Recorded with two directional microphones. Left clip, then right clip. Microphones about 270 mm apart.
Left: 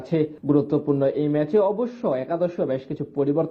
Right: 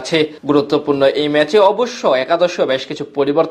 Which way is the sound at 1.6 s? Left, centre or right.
Right.